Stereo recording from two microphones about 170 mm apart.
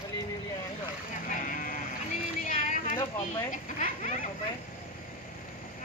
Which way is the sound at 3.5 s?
50° left (ahead or behind).